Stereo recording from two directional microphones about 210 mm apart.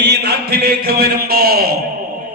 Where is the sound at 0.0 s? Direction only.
50° right (ahead or behind).